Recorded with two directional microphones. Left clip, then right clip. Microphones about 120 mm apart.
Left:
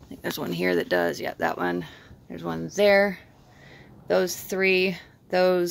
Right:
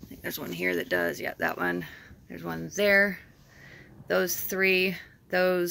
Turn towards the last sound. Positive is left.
turn(degrees=20)  # may be behind; listen again after turning